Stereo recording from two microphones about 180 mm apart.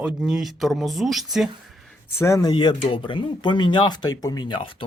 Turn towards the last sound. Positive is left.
turn(degrees=25)  # may be behind; listen again after turning